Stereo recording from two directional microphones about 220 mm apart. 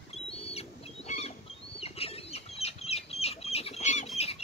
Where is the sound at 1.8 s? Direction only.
25° left (ahead or behind).